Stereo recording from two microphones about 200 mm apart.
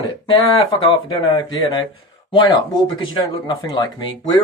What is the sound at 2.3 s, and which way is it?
Speech, 25° left (ahead or behind).